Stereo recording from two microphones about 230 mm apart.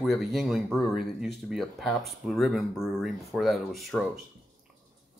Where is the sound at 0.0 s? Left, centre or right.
Centre.